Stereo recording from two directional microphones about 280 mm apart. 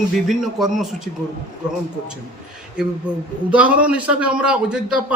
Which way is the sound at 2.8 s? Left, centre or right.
Centre.